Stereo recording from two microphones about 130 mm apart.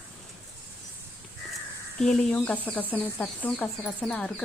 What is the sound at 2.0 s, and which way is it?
Speech, 5° left (ahead or behind).